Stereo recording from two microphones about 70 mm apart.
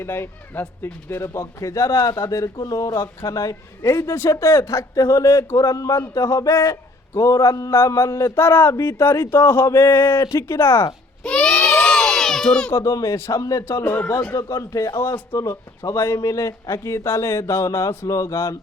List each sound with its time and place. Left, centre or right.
0.0 s a man's voice: left
3.9 s a man's voice: left
11.2 s crowd: centre
12.7 s a man's voice: left
13.7 s speech: left
14.3 s a man's voice: left
15.0 s a man's voice: left